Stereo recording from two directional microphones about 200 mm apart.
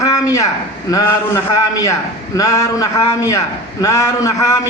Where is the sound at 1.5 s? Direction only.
15° left (ahead or behind).